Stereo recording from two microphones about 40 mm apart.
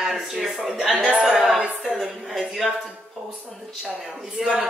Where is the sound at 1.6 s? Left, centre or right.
Centre.